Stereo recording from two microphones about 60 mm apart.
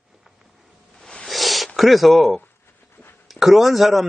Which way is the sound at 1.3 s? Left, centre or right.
Centre.